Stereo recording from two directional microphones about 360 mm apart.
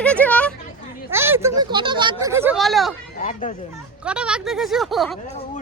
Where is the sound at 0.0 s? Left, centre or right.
Centre.